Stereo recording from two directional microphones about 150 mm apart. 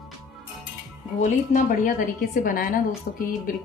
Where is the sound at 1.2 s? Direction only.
60° left (ahead or behind).